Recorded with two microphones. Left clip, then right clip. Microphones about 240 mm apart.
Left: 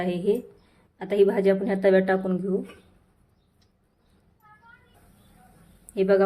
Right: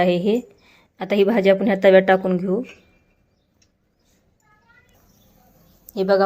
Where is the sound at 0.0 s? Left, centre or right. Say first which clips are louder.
Right 7 dB; right.